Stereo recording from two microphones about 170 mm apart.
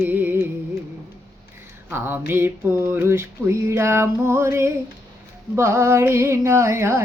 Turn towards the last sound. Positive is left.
turn(degrees=-15)  # may be behind; listen again after turning